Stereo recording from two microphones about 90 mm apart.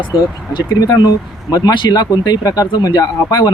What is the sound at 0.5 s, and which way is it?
Speech, 45° left (ahead or behind).